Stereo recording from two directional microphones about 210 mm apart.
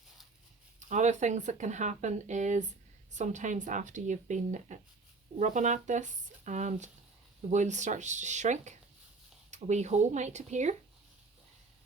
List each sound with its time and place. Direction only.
0.8 s speech: 35° right (ahead or behind)